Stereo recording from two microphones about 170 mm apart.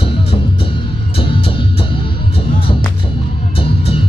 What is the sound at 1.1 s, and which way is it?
Music, 30° left (ahead or behind).